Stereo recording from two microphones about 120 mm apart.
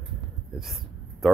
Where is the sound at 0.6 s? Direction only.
Centre (ahead or behind).